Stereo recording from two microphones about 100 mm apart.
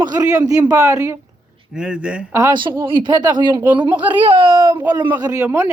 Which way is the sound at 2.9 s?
55° right (ahead or behind).